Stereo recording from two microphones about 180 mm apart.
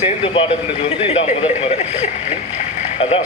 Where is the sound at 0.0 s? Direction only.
30° left (ahead or behind).